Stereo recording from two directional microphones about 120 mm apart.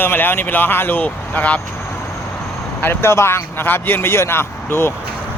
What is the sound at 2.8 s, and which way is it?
A man's voice, 20° left (ahead or behind).